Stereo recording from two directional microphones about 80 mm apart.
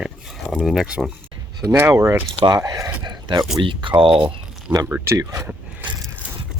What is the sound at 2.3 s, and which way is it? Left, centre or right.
Speech, right.